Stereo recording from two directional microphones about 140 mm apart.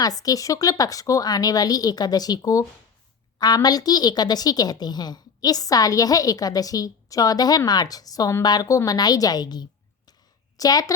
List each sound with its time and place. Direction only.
0.0 s a woman's voice: 25° left (ahead or behind)